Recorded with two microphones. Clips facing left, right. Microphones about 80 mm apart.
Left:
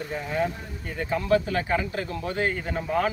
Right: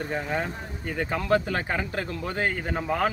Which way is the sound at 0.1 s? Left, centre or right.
Right.